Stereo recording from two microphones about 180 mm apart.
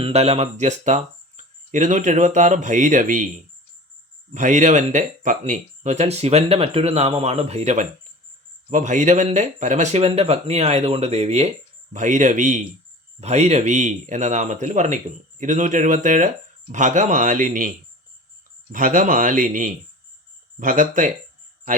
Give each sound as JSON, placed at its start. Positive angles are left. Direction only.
{"t": 0.0, "sound": "speech", "side_deg": -35}
{"t": 4.4, "sound": "speech", "side_deg": -45}